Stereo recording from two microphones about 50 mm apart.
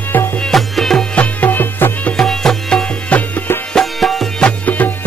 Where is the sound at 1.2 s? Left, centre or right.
Left.